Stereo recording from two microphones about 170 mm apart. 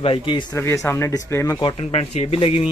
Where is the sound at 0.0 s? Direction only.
30° left (ahead or behind).